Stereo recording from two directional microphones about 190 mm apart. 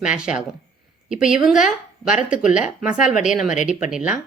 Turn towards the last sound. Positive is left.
turn(degrees=-5)  # may be behind; listen again after turning